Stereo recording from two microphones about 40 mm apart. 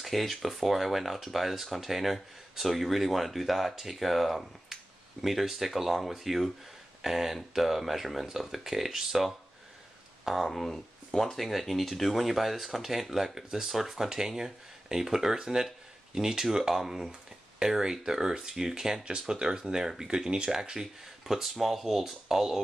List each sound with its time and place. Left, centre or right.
0.0 s speech: centre
19.0 s speech: right
20.8 s speech: centre